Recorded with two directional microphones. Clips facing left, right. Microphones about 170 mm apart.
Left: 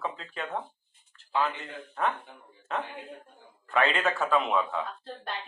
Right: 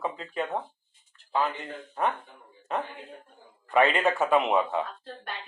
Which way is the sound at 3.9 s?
20° right (ahead or behind).